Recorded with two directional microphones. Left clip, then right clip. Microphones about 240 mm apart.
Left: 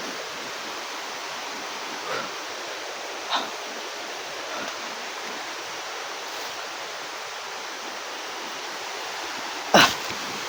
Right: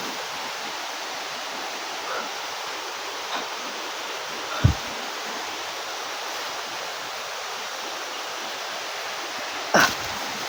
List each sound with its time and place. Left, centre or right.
9.7 s dog: left